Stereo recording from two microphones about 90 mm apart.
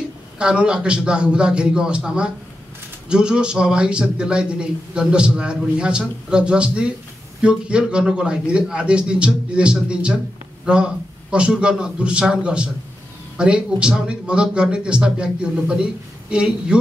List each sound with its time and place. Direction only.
0.4 s a man's voice: 10° right (ahead or behind)